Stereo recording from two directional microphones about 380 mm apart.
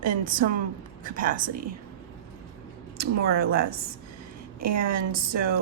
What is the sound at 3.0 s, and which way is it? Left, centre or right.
Speech, right.